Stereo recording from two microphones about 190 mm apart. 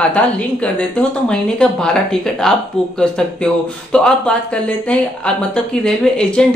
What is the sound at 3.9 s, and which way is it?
Speech, 5° left (ahead or behind).